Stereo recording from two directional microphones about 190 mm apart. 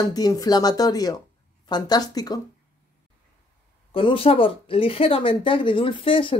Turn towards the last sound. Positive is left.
turn(degrees=25)  # may be behind; listen again after turning